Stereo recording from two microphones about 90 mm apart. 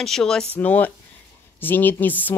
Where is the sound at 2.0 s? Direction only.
20° left (ahead or behind).